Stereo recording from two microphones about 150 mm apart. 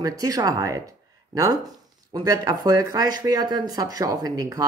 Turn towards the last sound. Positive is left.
turn(degrees=-25)  # may be behind; listen again after turning